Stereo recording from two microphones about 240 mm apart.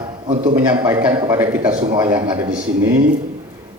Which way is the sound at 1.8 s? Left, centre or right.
Right.